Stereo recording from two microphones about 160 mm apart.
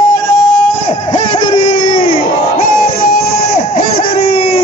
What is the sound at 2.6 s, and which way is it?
Music, 65° left (ahead or behind).